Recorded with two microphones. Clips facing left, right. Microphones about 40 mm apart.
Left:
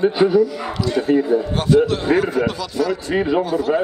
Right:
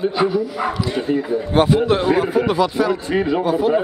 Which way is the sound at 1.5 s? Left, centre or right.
Right.